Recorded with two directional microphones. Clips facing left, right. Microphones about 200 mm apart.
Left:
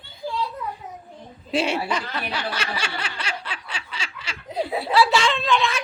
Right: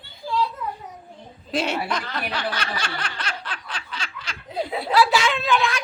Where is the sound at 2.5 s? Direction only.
10° left (ahead or behind).